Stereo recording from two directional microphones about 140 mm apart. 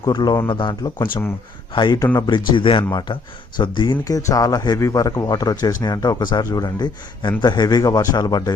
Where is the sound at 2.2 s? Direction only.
35° left (ahead or behind).